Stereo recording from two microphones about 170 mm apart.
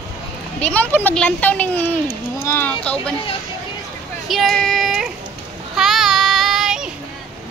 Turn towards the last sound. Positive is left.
turn(degrees=-5)  # may be behind; listen again after turning